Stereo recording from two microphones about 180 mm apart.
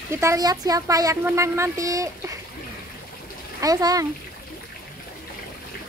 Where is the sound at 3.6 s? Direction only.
20° right (ahead or behind).